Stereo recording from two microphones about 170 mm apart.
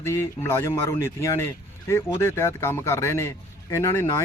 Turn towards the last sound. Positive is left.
turn(degrees=15)  # may be behind; listen again after turning